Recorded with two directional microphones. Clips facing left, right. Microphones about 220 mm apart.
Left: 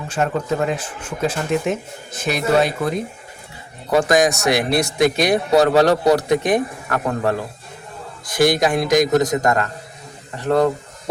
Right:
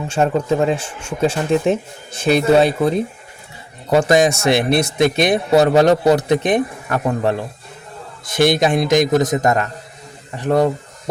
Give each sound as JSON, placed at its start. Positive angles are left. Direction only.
{"t": 0.1, "sound": "a man's voice", "side_deg": -30}